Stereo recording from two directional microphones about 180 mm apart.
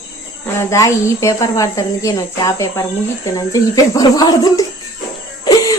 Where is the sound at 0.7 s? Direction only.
15° left (ahead or behind).